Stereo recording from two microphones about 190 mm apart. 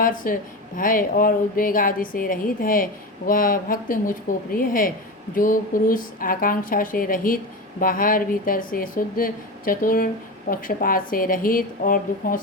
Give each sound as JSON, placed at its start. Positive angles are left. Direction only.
{"t": 0.0, "sound": "a woman's voice", "side_deg": 45}